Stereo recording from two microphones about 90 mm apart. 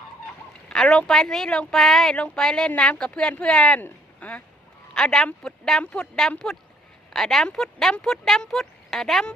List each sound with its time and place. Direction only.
0.7 s speech: 5° left (ahead or behind)